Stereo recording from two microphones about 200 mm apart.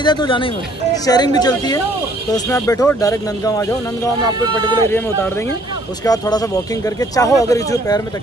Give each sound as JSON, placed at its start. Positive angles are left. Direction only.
{"t": 0.0, "sound": "speech", "side_deg": 20}
{"t": 6.0, "sound": "speech", "side_deg": 20}